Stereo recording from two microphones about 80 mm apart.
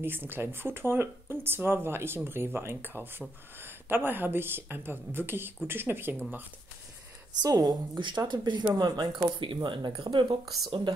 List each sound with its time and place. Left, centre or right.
0.0 s speech: right
7.4 s a woman's voice: right
8.0 s speech: right